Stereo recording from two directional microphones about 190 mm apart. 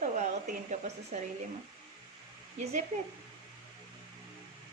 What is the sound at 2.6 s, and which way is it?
Speech, 35° right (ahead or behind).